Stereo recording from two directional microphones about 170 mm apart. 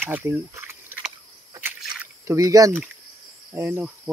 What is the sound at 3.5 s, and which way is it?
Speech, 15° right (ahead or behind).